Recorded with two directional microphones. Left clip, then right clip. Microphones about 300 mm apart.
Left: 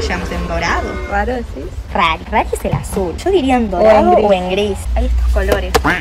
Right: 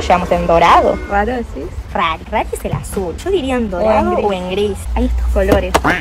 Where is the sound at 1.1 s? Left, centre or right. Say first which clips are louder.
Right 2 dB; right.